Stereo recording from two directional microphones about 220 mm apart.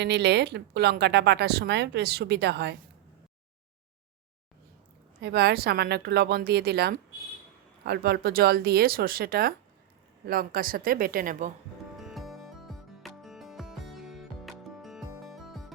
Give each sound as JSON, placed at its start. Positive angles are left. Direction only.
{"t": 0.0, "sound": "speech", "side_deg": -50}
{"t": 5.2, "sound": "speech", "side_deg": -50}
{"t": 11.9, "sound": "music", "side_deg": 0}